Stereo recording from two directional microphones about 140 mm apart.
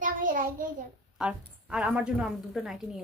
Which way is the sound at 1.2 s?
5° right (ahead or behind).